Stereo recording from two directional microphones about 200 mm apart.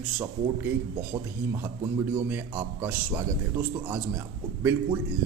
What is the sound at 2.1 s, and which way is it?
A man's voice, 10° right (ahead or behind).